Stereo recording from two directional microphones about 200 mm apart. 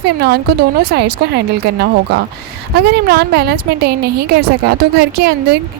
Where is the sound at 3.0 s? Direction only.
50° right (ahead or behind).